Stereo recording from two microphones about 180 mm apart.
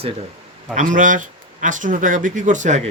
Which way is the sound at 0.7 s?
45° right (ahead or behind).